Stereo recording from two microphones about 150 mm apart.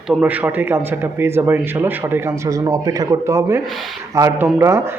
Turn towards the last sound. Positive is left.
turn(degrees=-20)  # may be behind; listen again after turning